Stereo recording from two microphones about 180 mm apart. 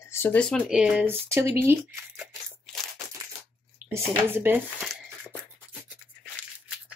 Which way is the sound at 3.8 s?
10° right (ahead or behind).